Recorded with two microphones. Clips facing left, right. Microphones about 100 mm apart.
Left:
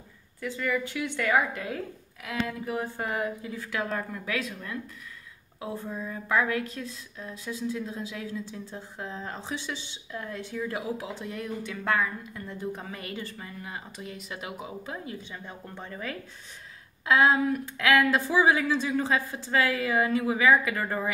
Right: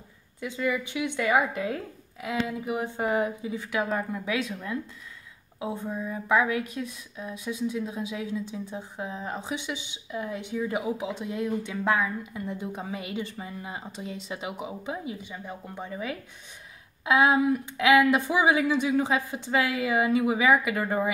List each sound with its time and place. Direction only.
0.4 s speech: 15° right (ahead or behind)